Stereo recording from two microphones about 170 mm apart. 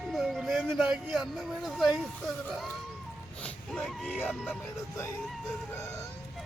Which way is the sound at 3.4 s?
5° left (ahead or behind).